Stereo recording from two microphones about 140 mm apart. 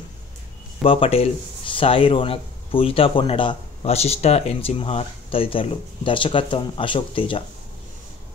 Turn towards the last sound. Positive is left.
turn(degrees=40)  # may be behind; listen again after turning